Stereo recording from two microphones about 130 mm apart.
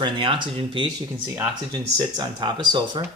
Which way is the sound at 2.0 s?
35° right (ahead or behind).